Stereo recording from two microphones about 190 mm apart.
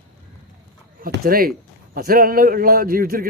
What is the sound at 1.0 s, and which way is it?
Speech, 50° right (ahead or behind).